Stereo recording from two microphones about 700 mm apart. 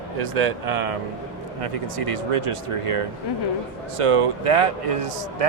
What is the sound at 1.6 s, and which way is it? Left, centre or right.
Speech, right.